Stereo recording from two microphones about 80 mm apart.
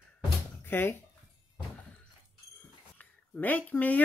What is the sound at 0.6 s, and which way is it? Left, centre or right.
Speech, left.